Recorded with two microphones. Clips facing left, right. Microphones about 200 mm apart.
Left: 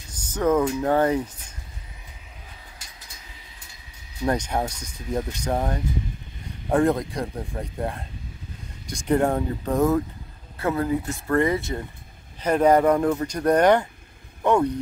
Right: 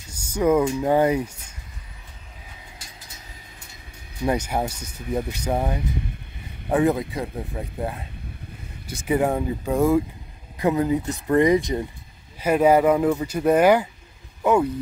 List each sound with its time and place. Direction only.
0.1 s speech: 10° right (ahead or behind)
4.2 s speech: 10° right (ahead or behind)